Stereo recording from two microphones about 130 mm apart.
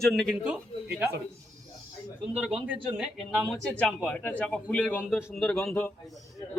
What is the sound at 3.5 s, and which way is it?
Speech, 10° left (ahead or behind).